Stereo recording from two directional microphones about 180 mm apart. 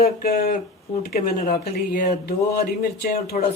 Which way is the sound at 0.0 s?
55° left (ahead or behind).